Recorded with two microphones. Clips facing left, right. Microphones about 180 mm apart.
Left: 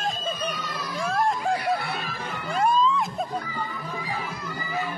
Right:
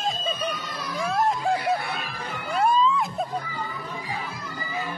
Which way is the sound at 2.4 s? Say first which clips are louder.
Right 1 dB; centre (ahead or behind).